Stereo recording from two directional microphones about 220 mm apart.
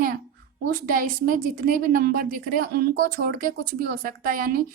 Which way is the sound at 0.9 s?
40° right (ahead or behind).